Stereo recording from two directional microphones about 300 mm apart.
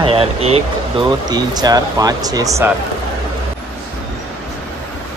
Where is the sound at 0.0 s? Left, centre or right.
Centre.